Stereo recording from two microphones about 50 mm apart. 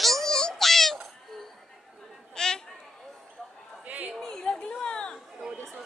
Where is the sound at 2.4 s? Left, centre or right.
Centre.